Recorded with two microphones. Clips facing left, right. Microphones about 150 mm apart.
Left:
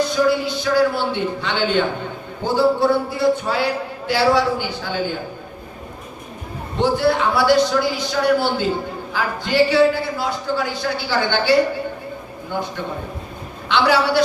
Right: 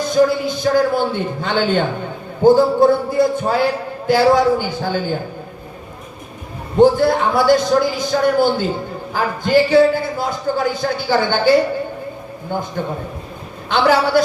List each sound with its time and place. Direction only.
0.1 s a man's voice: 45° right (ahead or behind)
6.7 s a man's voice: 45° right (ahead or behind)
13.7 s a man's voice: 45° right (ahead or behind)